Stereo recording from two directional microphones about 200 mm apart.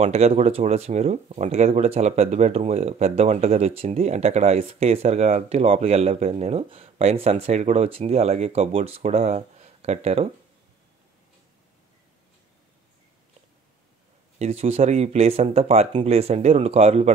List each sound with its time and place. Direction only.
0.0 s speech: 30° right (ahead or behind)
14.4 s speech: 30° right (ahead or behind)